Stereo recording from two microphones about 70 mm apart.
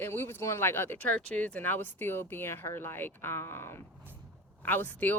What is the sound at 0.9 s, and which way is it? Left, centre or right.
Speech, centre.